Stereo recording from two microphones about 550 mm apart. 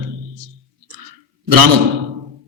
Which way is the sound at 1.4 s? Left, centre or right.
Right.